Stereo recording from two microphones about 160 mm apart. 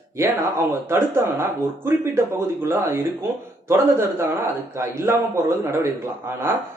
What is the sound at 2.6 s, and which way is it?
A man's voice, 15° right (ahead or behind).